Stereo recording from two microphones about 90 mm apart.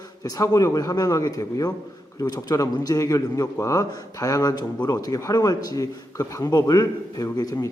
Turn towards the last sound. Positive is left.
turn(degrees=45)  # may be behind; listen again after turning